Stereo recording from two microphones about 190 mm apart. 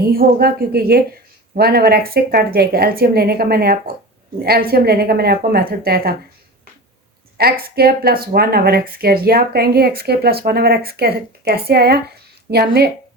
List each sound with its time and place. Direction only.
0.0 s a woman's voice: 50° right (ahead or behind)
7.6 s speech: 55° right (ahead or behind)